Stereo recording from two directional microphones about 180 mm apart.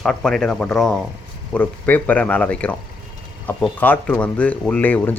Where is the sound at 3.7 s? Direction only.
10° left (ahead or behind).